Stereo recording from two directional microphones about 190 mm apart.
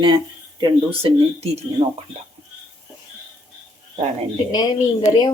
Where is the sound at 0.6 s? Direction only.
30° right (ahead or behind).